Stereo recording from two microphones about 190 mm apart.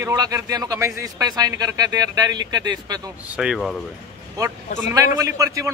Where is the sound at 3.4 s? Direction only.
5° right (ahead or behind).